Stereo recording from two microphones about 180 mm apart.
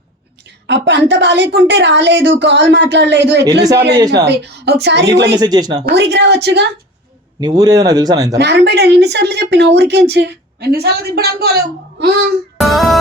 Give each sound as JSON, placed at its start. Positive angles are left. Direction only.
{"t": 0.7, "sound": "a woman's voice", "side_deg": -80}
{"t": 3.6, "sound": "speech", "side_deg": -20}
{"t": 4.3, "sound": "speech", "side_deg": -70}
{"t": 5.4, "sound": "speech", "side_deg": -20}
{"t": 5.8, "sound": "speech", "side_deg": -70}
{"t": 7.3, "sound": "speech", "side_deg": -20}
{"t": 8.4, "sound": "speech", "side_deg": -70}
{"t": 12.5, "sound": "music", "side_deg": 0}